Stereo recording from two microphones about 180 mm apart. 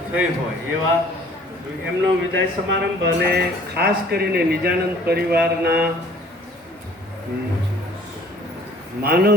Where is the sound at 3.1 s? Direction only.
65° right (ahead or behind).